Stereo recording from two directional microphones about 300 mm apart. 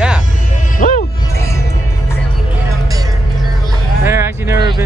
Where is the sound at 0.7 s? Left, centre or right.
Left.